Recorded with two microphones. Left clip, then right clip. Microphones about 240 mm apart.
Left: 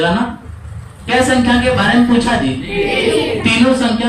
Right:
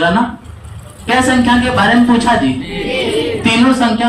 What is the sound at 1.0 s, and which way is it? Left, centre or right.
Speech, right.